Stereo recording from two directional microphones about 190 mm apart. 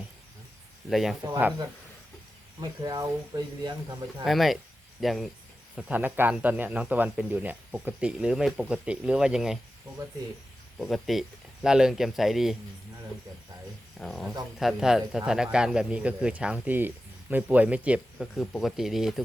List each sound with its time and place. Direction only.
0.9 s speech: centre (ahead or behind)
1.2 s a man's voice: 10° right (ahead or behind)
2.6 s speech: 20° right (ahead or behind)
4.2 s a man's voice: centre (ahead or behind)
10.8 s speech: centre (ahead or behind)
14.0 s speech: centre (ahead or behind)